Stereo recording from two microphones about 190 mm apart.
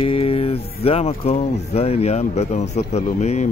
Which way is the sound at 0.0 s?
30° left (ahead or behind).